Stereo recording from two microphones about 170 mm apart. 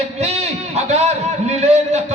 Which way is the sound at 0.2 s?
40° right (ahead or behind).